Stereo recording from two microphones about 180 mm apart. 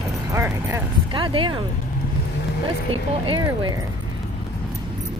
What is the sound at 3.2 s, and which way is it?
Speech, 25° right (ahead or behind).